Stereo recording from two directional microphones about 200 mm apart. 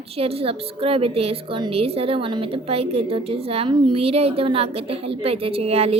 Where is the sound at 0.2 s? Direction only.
30° right (ahead or behind).